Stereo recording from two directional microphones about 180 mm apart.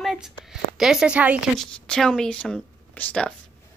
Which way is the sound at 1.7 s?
5° left (ahead or behind).